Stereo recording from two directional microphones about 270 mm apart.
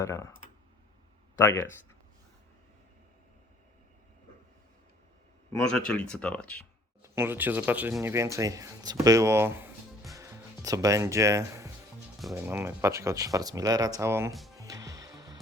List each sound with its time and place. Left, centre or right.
0.0 s speech: centre
1.4 s speech: centre
5.5 s speech: centre
7.0 s speech: centre
10.2 s music: centre
12.3 s speech: centre
14.5 s music: centre